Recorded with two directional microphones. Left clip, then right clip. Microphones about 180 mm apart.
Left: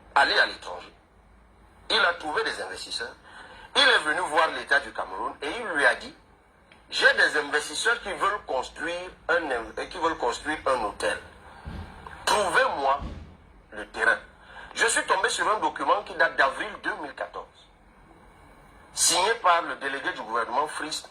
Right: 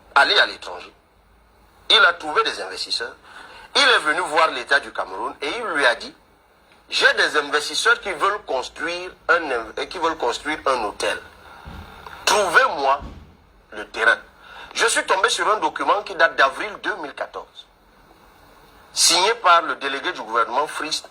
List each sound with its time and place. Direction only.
0.1 s a man's voice: 25° right (ahead or behind)
1.9 s a man's voice: 25° right (ahead or behind)
7.0 s a man's voice: 25° right (ahead or behind)
19.0 s a man's voice: 25° right (ahead or behind)